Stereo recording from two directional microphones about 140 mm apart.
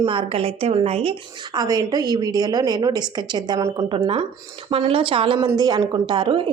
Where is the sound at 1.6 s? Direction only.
25° right (ahead or behind).